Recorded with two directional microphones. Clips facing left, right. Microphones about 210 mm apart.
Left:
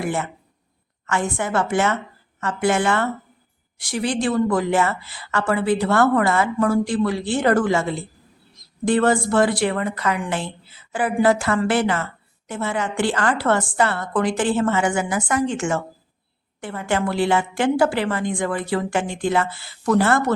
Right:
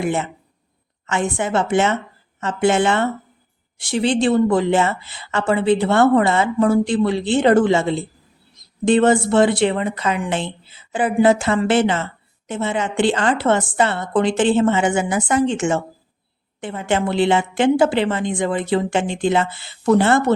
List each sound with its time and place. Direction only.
0.0 s speech: 20° right (ahead or behind)